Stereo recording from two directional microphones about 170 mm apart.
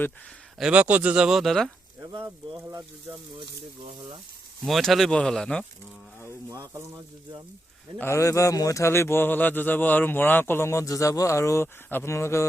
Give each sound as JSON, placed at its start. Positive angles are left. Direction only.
{"t": 0.6, "sound": "speech", "side_deg": -10}
{"t": 2.0, "sound": "speech", "side_deg": -20}
{"t": 4.6, "sound": "speech", "side_deg": 0}
{"t": 6.5, "sound": "speech", "side_deg": -20}
{"t": 7.9, "sound": "speech", "side_deg": 15}